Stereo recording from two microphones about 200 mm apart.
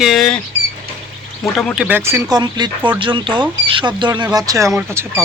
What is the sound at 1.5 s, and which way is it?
Speech, centre (ahead or behind).